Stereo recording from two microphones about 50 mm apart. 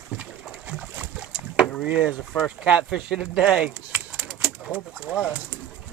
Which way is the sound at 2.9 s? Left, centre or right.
Centre.